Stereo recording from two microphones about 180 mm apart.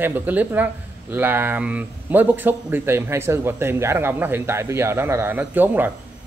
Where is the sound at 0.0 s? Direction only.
10° right (ahead or behind).